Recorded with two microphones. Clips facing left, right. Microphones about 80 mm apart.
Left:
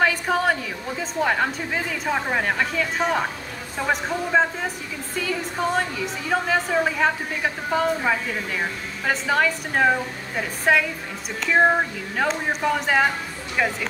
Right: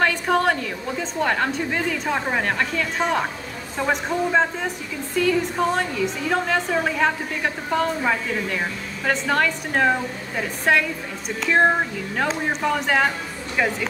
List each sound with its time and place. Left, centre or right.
0.0 s a woman's voice: centre